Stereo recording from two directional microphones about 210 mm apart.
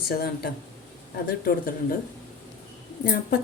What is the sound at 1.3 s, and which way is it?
Speech, 45° left (ahead or behind).